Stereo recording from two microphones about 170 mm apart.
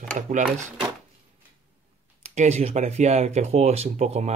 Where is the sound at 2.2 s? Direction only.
40° right (ahead or behind).